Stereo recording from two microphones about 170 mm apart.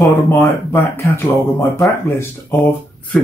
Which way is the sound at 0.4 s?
15° left (ahead or behind).